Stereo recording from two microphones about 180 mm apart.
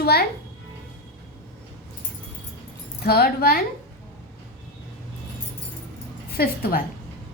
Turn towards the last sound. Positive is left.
turn(degrees=60)  # may be behind; listen again after turning